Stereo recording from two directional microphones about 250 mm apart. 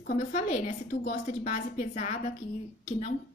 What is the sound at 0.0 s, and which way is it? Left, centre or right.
A woman's voice, left.